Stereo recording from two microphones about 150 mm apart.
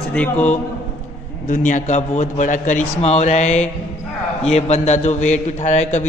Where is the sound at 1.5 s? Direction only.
55° left (ahead or behind).